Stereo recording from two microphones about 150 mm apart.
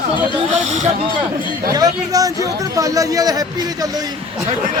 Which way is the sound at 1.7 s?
25° right (ahead or behind).